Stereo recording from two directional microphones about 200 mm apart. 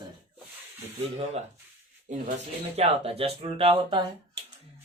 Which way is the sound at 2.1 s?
40° right (ahead or behind).